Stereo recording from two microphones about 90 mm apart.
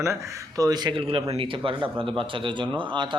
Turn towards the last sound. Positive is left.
turn(degrees=-65)  # may be behind; listen again after turning